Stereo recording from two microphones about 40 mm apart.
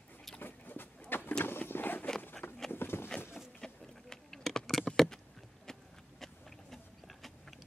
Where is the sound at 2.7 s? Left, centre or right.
Left.